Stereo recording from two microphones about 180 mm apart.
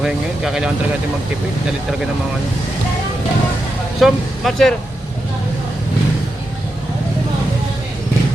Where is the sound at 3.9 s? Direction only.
Centre (ahead or behind).